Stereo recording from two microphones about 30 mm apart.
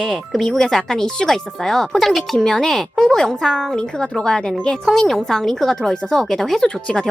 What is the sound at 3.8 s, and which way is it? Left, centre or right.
Speech, left.